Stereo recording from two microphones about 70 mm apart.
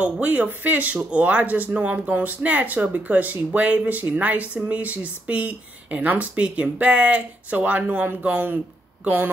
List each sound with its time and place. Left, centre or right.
0.0 s speech: right